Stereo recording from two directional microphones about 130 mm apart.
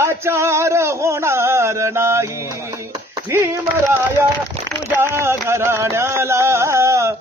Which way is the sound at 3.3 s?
20° right (ahead or behind).